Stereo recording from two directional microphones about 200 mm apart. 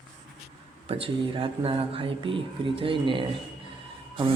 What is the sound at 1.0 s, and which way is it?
Speech, 25° right (ahead or behind).